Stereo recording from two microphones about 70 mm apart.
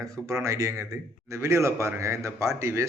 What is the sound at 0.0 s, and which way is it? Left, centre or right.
A man's voice, right.